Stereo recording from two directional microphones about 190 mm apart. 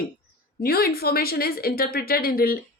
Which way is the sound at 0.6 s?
50° left (ahead or behind).